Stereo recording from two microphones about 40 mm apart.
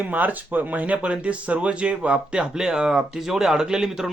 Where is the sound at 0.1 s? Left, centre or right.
Right.